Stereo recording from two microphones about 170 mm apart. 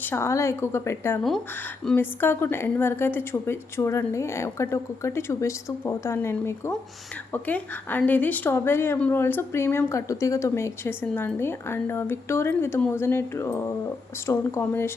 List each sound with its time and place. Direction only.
0.0 s a woman's voice: 15° left (ahead or behind)